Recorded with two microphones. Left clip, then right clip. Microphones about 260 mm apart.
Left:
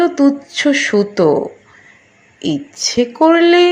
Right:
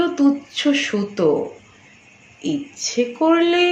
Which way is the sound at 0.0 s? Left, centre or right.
Left.